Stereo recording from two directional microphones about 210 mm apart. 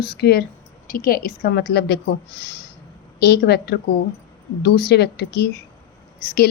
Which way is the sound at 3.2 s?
50° left (ahead or behind).